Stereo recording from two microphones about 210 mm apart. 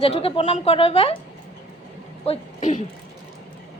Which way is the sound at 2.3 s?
35° left (ahead or behind).